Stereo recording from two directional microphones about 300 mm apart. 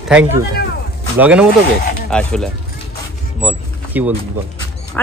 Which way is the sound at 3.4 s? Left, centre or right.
Centre.